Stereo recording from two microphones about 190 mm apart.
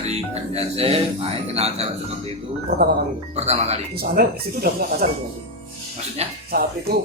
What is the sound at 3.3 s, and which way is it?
Speech, 35° right (ahead or behind).